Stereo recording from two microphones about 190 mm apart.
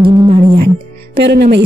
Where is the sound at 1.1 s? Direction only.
60° right (ahead or behind).